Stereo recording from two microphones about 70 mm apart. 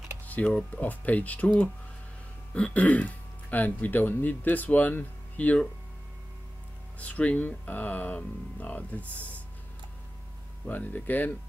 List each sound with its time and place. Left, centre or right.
0.3 s speech: left
7.0 s speech: centre
10.7 s speech: left